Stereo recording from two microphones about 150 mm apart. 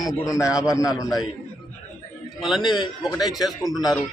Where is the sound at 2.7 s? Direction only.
30° left (ahead or behind).